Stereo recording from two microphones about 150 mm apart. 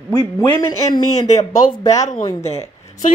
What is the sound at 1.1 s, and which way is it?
Speech, 50° left (ahead or behind).